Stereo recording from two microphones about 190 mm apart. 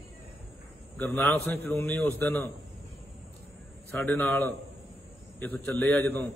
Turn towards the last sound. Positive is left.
turn(degrees=5)  # may be behind; listen again after turning